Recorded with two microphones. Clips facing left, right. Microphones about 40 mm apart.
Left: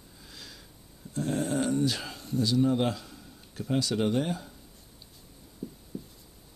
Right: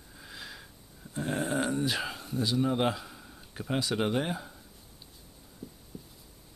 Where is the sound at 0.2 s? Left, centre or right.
Right.